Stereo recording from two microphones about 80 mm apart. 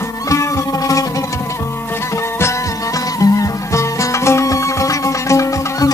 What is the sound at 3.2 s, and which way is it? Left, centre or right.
Music, left.